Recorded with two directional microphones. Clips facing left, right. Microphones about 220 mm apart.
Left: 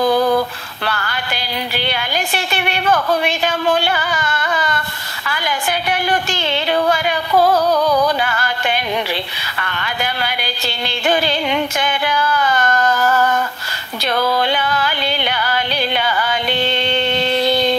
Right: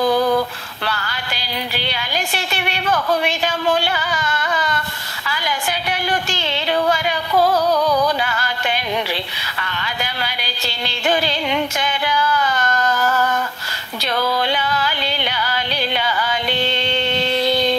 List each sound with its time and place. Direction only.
0.8 s music: 55° left (ahead or behind)
9.6 s a sound: 55° left (ahead or behind)
11.8 s music: 55° left (ahead or behind)
14.0 s music: 55° left (ahead or behind)